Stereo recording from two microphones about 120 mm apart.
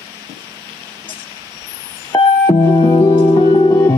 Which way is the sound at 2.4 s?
35° left (ahead or behind).